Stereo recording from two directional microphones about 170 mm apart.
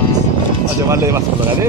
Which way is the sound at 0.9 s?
15° right (ahead or behind).